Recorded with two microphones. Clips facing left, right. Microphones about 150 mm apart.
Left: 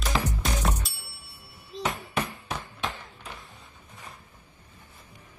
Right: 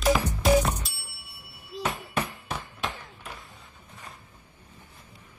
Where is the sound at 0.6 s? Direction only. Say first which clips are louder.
Right 5 dB; 5° right (ahead or behind).